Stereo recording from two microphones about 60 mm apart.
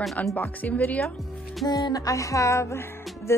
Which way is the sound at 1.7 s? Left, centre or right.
Left.